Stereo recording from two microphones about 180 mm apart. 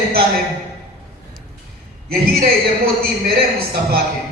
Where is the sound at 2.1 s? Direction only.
55° right (ahead or behind).